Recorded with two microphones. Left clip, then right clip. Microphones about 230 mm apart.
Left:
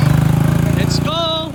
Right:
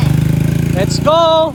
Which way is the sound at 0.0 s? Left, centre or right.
Centre.